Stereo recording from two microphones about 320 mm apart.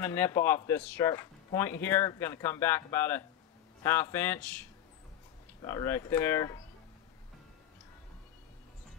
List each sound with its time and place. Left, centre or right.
0.0 s speech: centre